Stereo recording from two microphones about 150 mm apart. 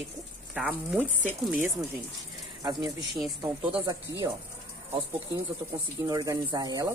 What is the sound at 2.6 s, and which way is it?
Speech, 25° right (ahead or behind).